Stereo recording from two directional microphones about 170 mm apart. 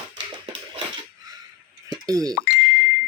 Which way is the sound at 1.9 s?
20° right (ahead or behind).